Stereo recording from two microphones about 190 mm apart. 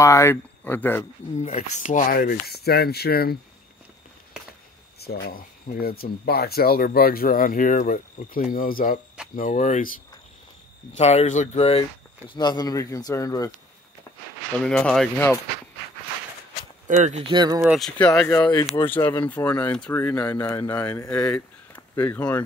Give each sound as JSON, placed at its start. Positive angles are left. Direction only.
{"t": 0.0, "sound": "speech", "side_deg": 15}
{"t": 1.4, "sound": "speech", "side_deg": 35}
{"t": 5.0, "sound": "speech", "side_deg": 55}
{"t": 11.0, "sound": "speech", "side_deg": 35}
{"t": 12.4, "sound": "speech", "side_deg": 20}
{"t": 14.6, "sound": "speech", "side_deg": 5}
{"t": 16.8, "sound": "speech", "side_deg": -40}
{"t": 17.3, "sound": "speech", "side_deg": -25}
{"t": 17.6, "sound": "speech", "side_deg": 0}
{"t": 18.3, "sound": "speech", "side_deg": 20}
{"t": 19.0, "sound": "speech", "side_deg": 10}